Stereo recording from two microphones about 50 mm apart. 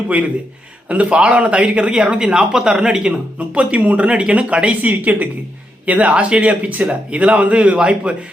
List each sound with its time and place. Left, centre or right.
0.9 s a woman's voice: right